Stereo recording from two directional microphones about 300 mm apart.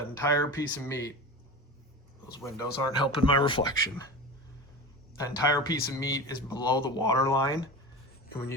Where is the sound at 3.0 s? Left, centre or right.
Centre.